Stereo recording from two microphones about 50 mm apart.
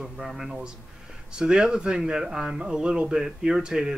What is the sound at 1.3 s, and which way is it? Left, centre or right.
Speech, centre.